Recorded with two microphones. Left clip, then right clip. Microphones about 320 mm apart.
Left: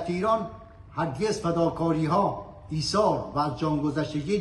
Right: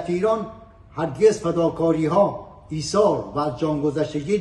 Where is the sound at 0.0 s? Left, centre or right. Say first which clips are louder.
Right 4 dB; centre.